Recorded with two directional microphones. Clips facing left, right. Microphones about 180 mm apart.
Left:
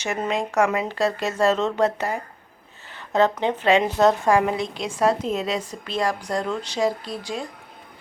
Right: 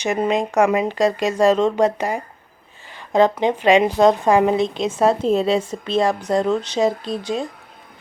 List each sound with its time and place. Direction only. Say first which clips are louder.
0.0 s a woman's voice: right 6 dB; 15° right (ahead or behind)